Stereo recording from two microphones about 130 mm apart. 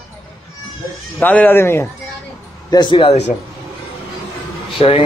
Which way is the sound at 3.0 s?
50° left (ahead or behind).